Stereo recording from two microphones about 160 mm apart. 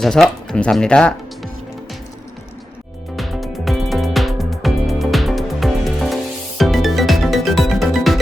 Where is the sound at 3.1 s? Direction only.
Centre (ahead or behind).